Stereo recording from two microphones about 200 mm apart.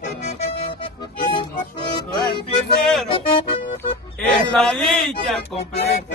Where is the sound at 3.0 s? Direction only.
25° left (ahead or behind).